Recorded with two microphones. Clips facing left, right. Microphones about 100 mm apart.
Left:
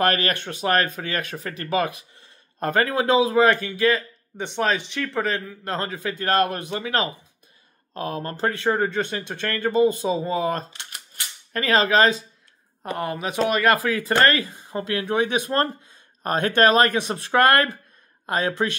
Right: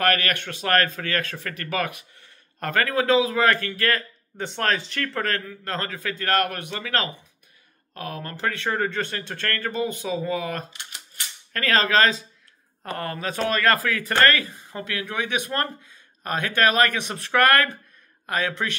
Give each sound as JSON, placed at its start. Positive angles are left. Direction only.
{"t": 0.0, "sound": "speech", "side_deg": 25}
{"t": 4.4, "sound": "speech", "side_deg": 10}
{"t": 5.3, "sound": "speech", "side_deg": 20}
{"t": 11.5, "sound": "speech", "side_deg": 20}